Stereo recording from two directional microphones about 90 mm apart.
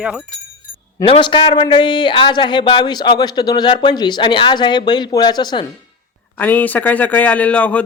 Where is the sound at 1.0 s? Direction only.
80° left; by 5.6 s 55° left (ahead or behind).